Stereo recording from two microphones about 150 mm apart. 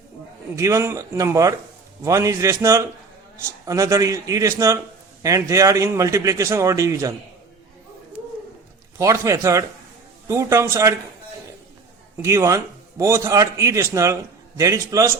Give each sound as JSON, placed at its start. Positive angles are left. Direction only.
{"t": 0.5, "sound": "a man's voice", "side_deg": -20}
{"t": 9.0, "sound": "a man's voice", "side_deg": -20}
{"t": 12.2, "sound": "a man's voice", "side_deg": -20}